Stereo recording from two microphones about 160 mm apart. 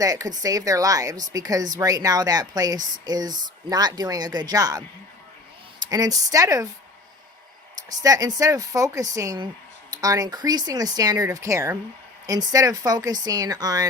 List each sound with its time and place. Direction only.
0.0 s a woman's voice: 20° right (ahead or behind)
5.9 s a woman's voice: 25° right (ahead or behind)
7.9 s a woman's voice: 20° right (ahead or behind)